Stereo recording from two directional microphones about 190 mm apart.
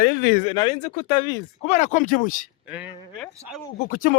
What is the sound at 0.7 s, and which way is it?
Speech, 40° left (ahead or behind).